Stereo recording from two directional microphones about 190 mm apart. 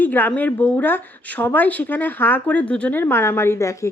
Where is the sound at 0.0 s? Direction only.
10° left (ahead or behind).